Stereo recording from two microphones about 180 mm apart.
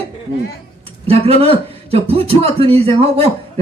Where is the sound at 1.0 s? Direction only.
35° right (ahead or behind).